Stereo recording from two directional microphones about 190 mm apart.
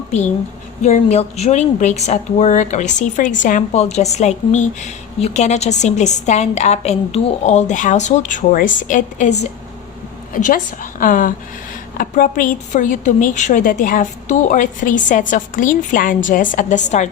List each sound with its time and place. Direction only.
0.8 s a woman's voice: 40° left (ahead or behind)